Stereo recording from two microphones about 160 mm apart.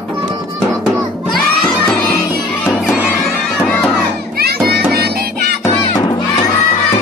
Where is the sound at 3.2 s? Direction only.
5° left (ahead or behind).